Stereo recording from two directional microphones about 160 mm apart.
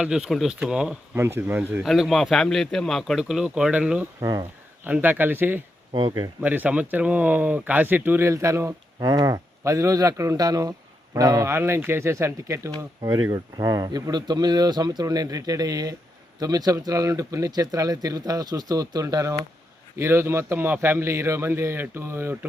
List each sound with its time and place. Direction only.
0.0 s a man's voice: 5° right (ahead or behind)
1.8 s speech: centre (ahead or behind)
4.2 s speech: 25° right (ahead or behind)
4.8 s a man's voice: 10° right (ahead or behind)
5.9 s speech: 30° right (ahead or behind)
6.4 s a man's voice: 10° right (ahead or behind)